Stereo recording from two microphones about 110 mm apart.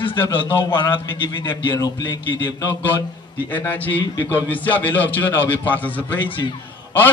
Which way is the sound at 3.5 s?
15° left (ahead or behind).